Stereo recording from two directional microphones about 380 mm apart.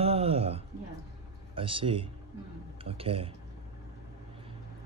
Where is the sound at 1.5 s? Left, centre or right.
Centre.